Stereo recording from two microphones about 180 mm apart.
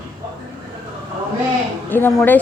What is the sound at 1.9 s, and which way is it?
Speech, 10° left (ahead or behind).